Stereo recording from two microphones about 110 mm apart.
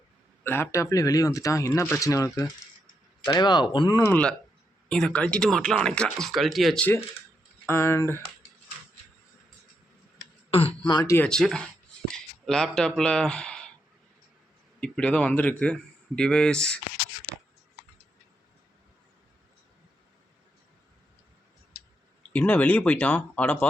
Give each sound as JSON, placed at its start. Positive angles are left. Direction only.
{"t": 0.4, "sound": "speech", "side_deg": 20}
{"t": 3.2, "sound": "speech", "side_deg": 40}
{"t": 4.1, "sound": "a man's voice", "side_deg": 10}
{"t": 7.7, "sound": "speech", "side_deg": 25}
{"t": 10.5, "sound": "speech", "side_deg": 60}
{"t": 10.8, "sound": "speech", "side_deg": 40}
{"t": 11.2, "sound": "speech", "side_deg": 5}
{"t": 14.8, "sound": "a man's voice", "side_deg": 10}
{"t": 22.3, "sound": "a man's voice", "side_deg": 15}